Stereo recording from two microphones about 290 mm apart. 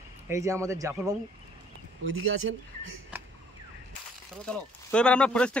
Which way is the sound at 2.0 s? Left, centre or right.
Right.